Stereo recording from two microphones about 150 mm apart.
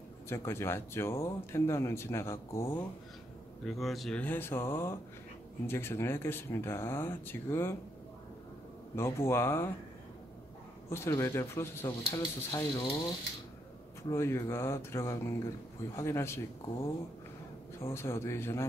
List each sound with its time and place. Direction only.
0.3 s speech: 15° left (ahead or behind)
3.6 s speech: centre (ahead or behind); by 7.7 s 15° left (ahead or behind)
8.9 s speech: 15° left (ahead or behind)
10.9 s speech: 20° left (ahead or behind)
14.1 s speech: 20° left (ahead or behind)
17.7 s speech: 20° left (ahead or behind)